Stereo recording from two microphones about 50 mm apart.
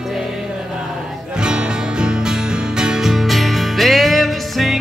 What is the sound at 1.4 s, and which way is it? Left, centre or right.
Music, centre.